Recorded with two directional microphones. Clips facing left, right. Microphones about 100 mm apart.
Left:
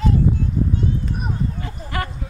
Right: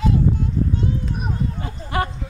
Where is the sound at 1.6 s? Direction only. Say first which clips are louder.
Right 3 dB; 25° right (ahead or behind).